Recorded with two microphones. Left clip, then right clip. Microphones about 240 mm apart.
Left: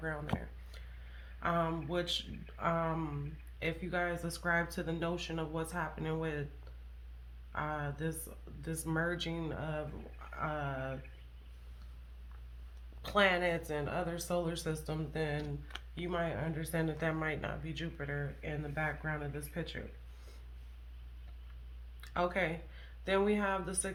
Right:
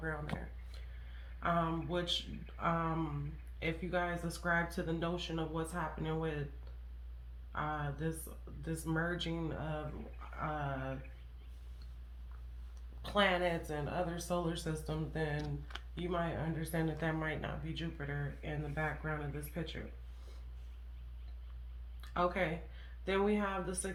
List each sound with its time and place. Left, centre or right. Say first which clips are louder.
1.4 s speech: left 1 dB; left
7.5 s speech: left 1 dB; left
13.0 s speech: left 2 dB; left
15.7 s a sound: left 1 dB; centre
16.0 s speech: left 1 dB; left
22.0 s a sound: even; left
23.0 s speech: left 2 dB; left